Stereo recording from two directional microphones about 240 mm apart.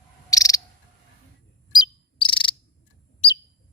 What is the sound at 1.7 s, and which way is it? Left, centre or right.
Cricket, centre.